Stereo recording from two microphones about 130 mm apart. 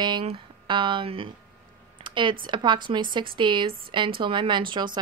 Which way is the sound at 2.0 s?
40° right (ahead or behind).